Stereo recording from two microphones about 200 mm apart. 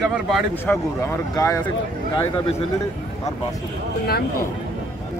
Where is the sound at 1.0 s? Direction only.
15° left (ahead or behind).